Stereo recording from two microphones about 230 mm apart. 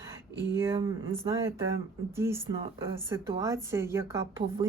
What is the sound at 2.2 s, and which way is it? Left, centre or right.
A woman's voice, centre.